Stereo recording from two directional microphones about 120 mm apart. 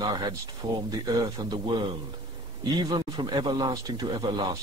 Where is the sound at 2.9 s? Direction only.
35° right (ahead or behind).